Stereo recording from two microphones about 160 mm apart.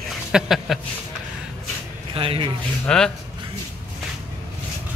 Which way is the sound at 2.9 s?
5° left (ahead or behind).